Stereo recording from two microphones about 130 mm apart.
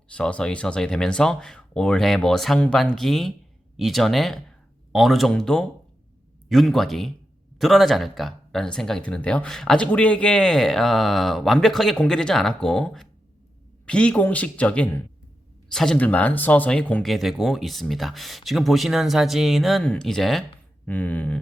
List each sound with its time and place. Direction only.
0.1 s speech: 10° left (ahead or behind)